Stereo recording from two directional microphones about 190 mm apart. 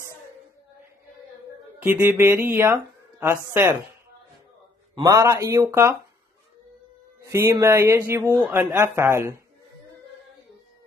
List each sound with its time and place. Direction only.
1.8 s speech: 10° right (ahead or behind)
4.9 s speech: 20° right (ahead or behind)
7.2 s speech: 15° right (ahead or behind)